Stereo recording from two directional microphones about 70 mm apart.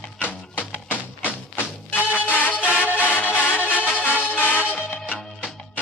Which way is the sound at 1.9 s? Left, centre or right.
Left.